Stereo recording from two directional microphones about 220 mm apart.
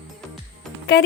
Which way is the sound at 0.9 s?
50° left (ahead or behind).